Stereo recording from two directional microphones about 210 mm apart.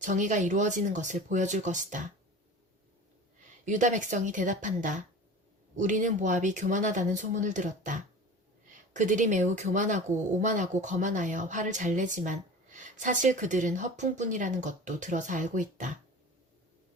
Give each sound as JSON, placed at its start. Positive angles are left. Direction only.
{"t": 0.0, "sound": "speech", "side_deg": -35}
{"t": 3.7, "sound": "speech", "side_deg": -35}